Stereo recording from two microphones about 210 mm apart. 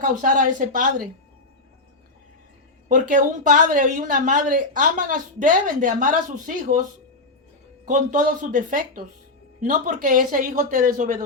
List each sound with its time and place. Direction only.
0.0 s speech: 40° right (ahead or behind)
2.9 s speech: 40° right (ahead or behind)
7.9 s speech: 40° right (ahead or behind)